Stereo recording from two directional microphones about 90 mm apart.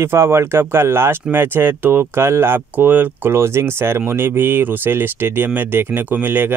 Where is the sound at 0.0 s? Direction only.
30° right (ahead or behind).